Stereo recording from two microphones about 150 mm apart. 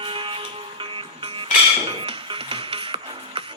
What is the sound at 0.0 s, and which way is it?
Music, 35° right (ahead or behind).